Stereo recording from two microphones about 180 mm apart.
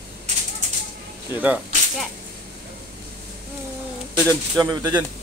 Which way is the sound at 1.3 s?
10° right (ahead or behind).